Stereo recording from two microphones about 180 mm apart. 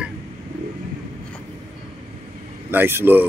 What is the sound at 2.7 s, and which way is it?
Speech, 10° right (ahead or behind).